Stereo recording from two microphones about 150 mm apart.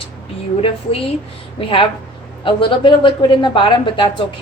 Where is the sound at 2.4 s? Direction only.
35° left (ahead or behind).